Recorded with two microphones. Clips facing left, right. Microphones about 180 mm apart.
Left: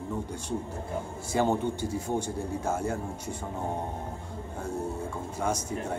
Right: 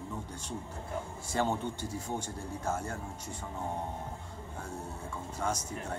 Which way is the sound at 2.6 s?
10° left (ahead or behind).